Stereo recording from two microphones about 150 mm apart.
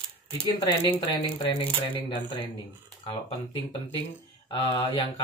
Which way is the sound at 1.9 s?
35° left (ahead or behind).